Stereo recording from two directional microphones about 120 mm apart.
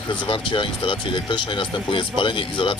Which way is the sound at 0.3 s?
45° left (ahead or behind).